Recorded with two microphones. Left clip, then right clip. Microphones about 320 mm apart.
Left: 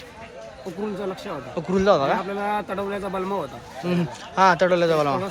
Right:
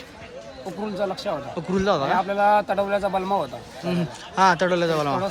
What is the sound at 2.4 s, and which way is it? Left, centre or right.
Speech, centre.